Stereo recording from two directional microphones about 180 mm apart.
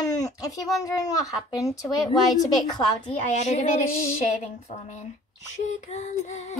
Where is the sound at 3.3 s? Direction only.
40° left (ahead or behind).